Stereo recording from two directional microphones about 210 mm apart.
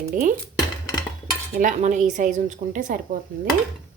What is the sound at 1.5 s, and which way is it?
A woman's voice, 35° right (ahead or behind).